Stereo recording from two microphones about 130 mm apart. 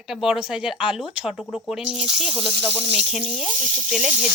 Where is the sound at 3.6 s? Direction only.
65° right (ahead or behind).